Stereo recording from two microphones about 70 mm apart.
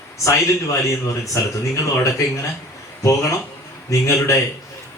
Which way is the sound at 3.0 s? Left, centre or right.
Left.